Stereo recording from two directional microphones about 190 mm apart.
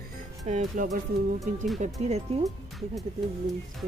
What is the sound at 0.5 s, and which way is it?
Speech, 40° right (ahead or behind).